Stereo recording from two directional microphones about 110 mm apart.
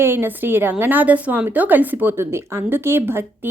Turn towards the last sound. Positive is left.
turn(degrees=-20)  # may be behind; listen again after turning